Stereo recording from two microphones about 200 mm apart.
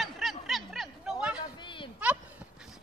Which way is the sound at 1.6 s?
25° left (ahead or behind).